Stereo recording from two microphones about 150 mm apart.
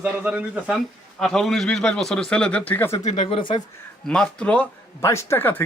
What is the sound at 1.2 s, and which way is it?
Speech, centre (ahead or behind).